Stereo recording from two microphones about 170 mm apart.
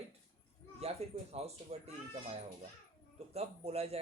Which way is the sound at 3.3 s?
35° right (ahead or behind).